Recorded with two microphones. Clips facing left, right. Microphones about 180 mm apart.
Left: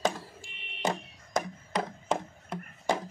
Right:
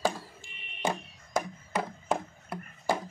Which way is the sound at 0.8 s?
10° right (ahead or behind).